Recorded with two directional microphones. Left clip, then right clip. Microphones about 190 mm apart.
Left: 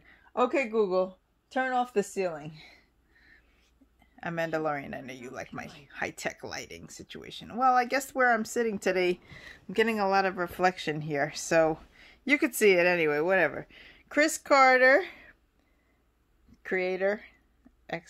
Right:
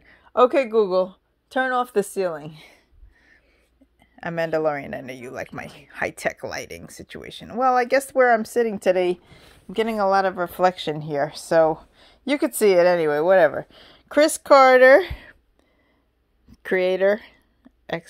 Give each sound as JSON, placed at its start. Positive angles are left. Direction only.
{"t": 0.3, "sound": "speech", "side_deg": -50}
{"t": 16.6, "sound": "speech", "side_deg": -45}